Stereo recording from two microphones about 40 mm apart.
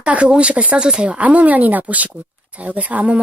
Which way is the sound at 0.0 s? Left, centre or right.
Right.